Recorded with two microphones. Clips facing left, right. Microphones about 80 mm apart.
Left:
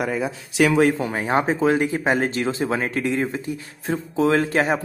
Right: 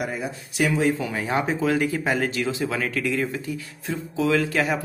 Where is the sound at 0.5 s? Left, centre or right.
Left.